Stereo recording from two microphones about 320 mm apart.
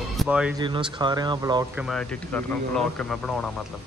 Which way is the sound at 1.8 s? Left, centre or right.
Centre.